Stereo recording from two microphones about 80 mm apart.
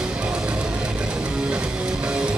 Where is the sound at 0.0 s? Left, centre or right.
Centre.